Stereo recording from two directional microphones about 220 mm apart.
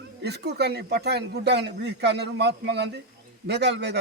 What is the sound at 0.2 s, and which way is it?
A man's voice, 50° right (ahead or behind).